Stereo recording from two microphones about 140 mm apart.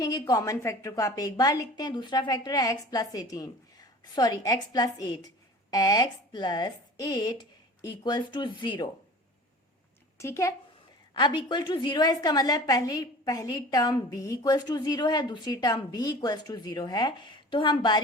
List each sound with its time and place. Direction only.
0.0 s a woman's voice: 25° left (ahead or behind)
10.2 s a woman's voice: 20° left (ahead or behind)
11.1 s a woman's voice: 30° left (ahead or behind)